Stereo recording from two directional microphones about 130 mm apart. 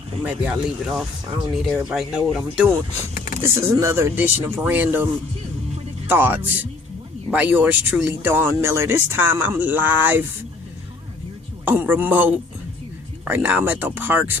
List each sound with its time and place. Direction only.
0.3 s speech: 10° right (ahead or behind)
3.4 s speech: 20° right (ahead or behind)
6.1 s speech: 15° right (ahead or behind)
11.6 s speech: 15° right (ahead or behind)